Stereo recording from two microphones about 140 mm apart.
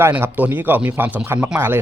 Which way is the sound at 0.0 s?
15° right (ahead or behind).